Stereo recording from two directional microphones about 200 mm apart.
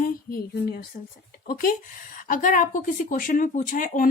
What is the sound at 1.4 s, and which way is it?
A woman's voice, 45° left (ahead or behind).